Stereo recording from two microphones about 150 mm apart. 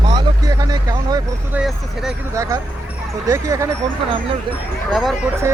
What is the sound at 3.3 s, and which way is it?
Speech, 20° right (ahead or behind).